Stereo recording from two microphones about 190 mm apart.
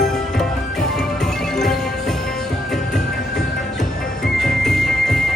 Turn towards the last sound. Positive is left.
turn(degrees=0)  # may be behind; listen again after turning